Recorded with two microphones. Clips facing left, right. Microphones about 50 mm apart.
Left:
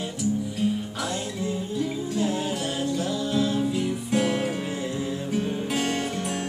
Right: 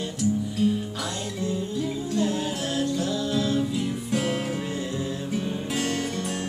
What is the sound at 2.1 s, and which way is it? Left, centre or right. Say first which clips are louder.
Music: right 1 dB; centre.